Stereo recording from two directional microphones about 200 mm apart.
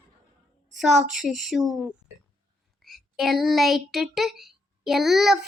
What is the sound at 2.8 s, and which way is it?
Child singing, centre (ahead or behind).